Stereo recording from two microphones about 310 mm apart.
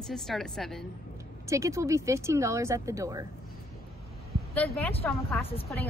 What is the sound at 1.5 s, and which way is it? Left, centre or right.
Speech, centre.